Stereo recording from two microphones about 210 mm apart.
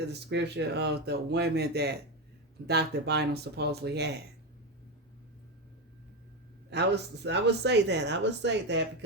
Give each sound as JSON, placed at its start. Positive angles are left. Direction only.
{"t": 0.1, "sound": "speech", "side_deg": -55}
{"t": 6.7, "sound": "speech", "side_deg": -50}